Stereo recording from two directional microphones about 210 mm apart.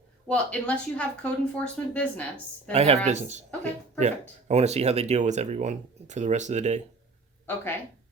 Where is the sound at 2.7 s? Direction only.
30° right (ahead or behind).